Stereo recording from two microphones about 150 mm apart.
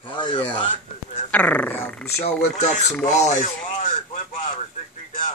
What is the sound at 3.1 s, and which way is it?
Speech, 50° left (ahead or behind).